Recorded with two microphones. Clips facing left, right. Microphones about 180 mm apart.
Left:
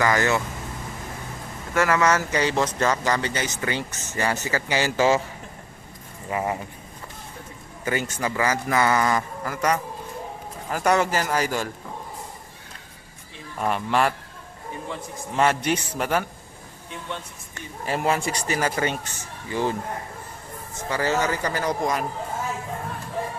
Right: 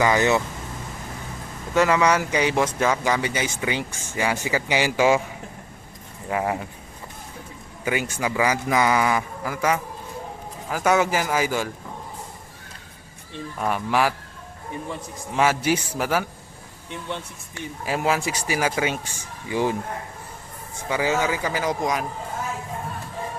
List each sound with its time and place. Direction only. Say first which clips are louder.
0.0 s speech: right 2 dB; 15° right (ahead or behind)
1.7 s speech: right 2 dB; 20° right (ahead or behind)
6.3 s speech: right 2 dB; 5° right (ahead or behind)
7.9 s speech: right 1 dB; 10° right (ahead or behind)
13.6 s speech: even; 5° right (ahead or behind)
15.4 s speech: right 1 dB; 5° right (ahead or behind)
17.5 s speech: right 1 dB; 5° right (ahead or behind)
20.9 s speech: right 1 dB; 5° right (ahead or behind)